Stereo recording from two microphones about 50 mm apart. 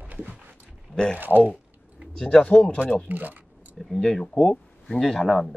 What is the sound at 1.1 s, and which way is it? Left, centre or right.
Speech, right.